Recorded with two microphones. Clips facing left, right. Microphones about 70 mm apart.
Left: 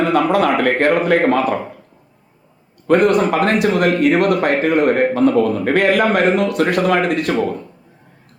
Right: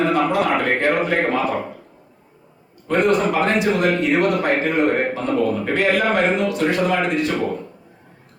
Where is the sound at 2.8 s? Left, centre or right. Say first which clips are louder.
Left 4 dB; left.